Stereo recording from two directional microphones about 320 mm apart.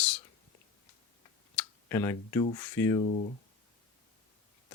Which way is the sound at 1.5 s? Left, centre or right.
Centre.